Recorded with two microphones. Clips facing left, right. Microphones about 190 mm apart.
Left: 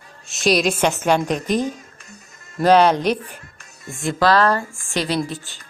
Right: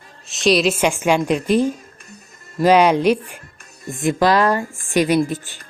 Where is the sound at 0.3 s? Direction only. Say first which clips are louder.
Right 2 dB; centre (ahead or behind).